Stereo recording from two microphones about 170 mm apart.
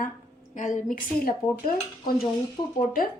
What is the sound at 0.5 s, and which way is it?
Speech, 50° left (ahead or behind).